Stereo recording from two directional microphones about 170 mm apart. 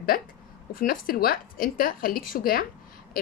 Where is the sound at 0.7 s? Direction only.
60° left (ahead or behind).